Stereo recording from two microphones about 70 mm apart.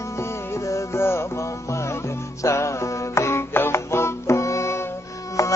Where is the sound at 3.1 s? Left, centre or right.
Left.